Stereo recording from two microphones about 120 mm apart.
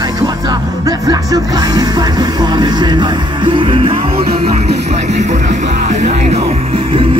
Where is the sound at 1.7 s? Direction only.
35° right (ahead or behind).